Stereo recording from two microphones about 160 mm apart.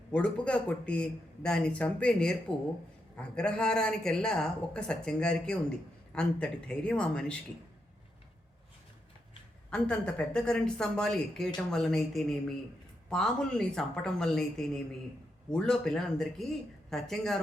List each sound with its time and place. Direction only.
0.1 s a man's voice: 5° left (ahead or behind)
9.6 s a woman's voice: 5° left (ahead or behind)